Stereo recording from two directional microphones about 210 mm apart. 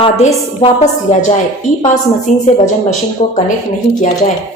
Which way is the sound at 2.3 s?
35° left (ahead or behind).